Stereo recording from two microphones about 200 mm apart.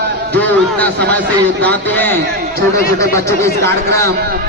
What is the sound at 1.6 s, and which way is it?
Speech, 10° left (ahead or behind).